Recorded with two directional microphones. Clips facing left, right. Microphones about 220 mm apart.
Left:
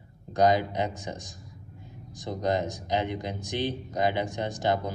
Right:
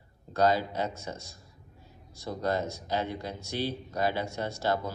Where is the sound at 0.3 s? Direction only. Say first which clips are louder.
Left 3 dB; 15° left (ahead or behind).